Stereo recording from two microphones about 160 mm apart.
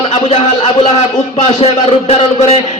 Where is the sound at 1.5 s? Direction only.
40° left (ahead or behind).